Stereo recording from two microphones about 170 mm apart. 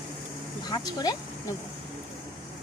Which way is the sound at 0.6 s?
25° left (ahead or behind).